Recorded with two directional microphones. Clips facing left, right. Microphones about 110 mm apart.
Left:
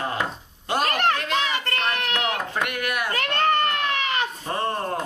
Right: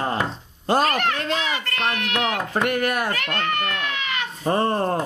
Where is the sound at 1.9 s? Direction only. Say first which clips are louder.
Even; 40° left (ahead or behind).